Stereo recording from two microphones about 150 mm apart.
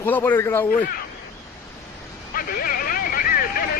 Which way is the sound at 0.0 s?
15° left (ahead or behind).